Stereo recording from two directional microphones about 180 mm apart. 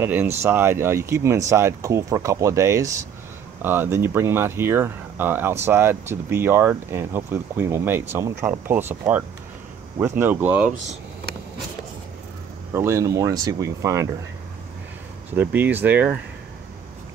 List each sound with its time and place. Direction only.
0.0 s speech: 10° right (ahead or behind)
12.7 s speech: 15° right (ahead or behind)
15.3 s speech: 10° right (ahead or behind)